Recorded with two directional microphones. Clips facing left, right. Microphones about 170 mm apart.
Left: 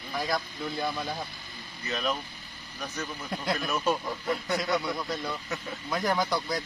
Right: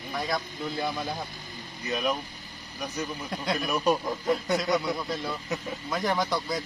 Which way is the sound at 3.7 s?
15° right (ahead or behind).